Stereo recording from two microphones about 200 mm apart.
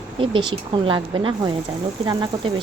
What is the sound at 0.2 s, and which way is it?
Speech, 25° right (ahead or behind).